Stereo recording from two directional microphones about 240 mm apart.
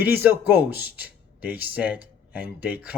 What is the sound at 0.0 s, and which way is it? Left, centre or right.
Speech, centre.